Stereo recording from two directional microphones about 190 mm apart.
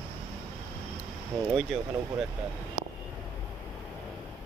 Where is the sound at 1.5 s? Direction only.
Centre (ahead or behind).